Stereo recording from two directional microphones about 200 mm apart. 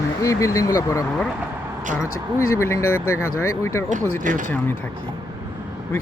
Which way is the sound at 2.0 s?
90° left.